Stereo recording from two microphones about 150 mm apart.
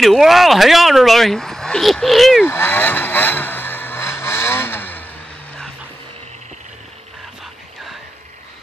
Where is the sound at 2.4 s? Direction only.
15° left (ahead or behind).